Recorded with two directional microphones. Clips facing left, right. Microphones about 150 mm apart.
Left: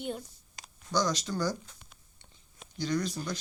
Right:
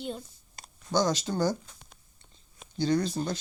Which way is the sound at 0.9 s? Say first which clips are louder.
Right 3 dB; 25° right (ahead or behind).